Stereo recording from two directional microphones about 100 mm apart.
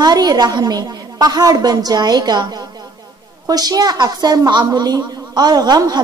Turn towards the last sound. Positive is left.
turn(degrees=-40)  # may be behind; listen again after turning